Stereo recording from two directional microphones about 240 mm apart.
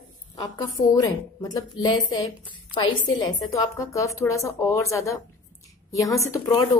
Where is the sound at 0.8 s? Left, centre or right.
Centre.